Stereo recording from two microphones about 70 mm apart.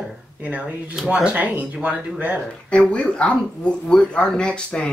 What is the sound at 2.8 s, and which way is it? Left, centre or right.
Speech, centre.